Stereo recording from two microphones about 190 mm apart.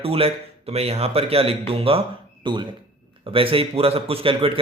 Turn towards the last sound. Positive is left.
turn(degrees=-30)  # may be behind; listen again after turning